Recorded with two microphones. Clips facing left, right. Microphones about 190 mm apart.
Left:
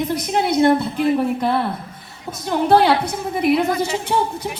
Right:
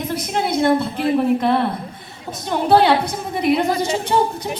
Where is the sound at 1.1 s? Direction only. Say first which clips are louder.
Right 3 dB; 5° left (ahead or behind).